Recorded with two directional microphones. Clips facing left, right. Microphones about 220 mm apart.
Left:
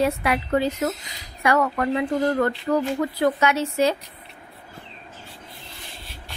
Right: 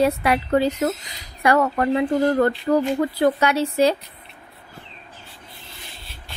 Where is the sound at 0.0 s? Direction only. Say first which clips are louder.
Right 3 dB; 35° right (ahead or behind).